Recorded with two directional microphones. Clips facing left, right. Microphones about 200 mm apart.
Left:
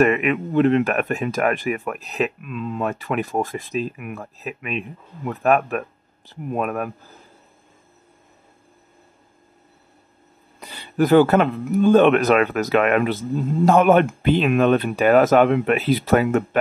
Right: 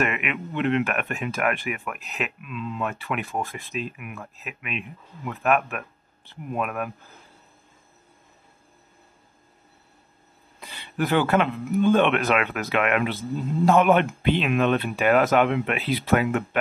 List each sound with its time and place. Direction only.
0.0 s speech: 40° left (ahead or behind)
10.6 s speech: 40° left (ahead or behind)